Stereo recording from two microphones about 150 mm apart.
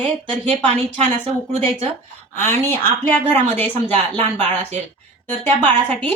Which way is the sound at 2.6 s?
15° left (ahead or behind).